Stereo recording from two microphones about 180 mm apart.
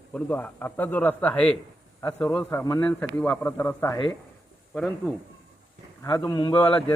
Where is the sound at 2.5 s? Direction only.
15° left (ahead or behind).